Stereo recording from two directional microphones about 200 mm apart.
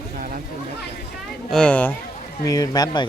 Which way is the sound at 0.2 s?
45° right (ahead or behind).